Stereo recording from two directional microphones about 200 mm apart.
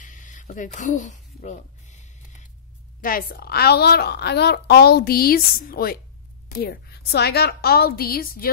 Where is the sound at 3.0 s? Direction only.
45° left (ahead or behind).